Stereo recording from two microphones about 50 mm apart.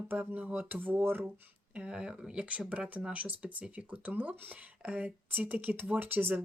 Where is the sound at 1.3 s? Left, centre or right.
Right.